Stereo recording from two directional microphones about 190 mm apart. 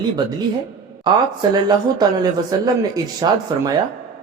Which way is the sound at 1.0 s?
20° right (ahead or behind).